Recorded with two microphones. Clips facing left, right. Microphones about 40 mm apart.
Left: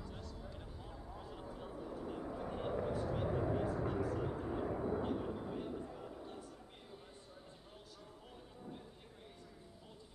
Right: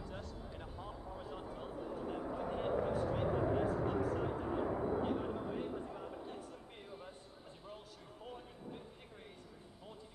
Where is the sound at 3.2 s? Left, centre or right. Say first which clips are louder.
Right 2 dB; centre.